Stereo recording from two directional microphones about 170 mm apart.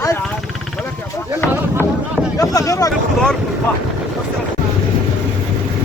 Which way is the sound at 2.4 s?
20° left (ahead or behind).